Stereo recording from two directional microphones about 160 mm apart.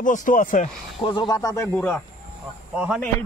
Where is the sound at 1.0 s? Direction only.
30° left (ahead or behind).